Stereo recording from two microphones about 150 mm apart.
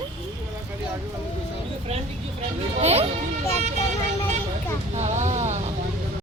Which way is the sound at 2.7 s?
45° right (ahead or behind).